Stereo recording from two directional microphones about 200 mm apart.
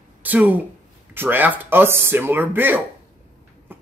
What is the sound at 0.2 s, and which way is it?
Speech, 10° right (ahead or behind).